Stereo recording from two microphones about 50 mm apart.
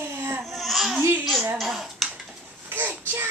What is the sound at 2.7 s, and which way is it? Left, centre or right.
Child singing, right.